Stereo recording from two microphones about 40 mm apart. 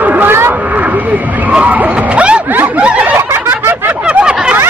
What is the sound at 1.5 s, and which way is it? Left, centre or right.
Speech, right.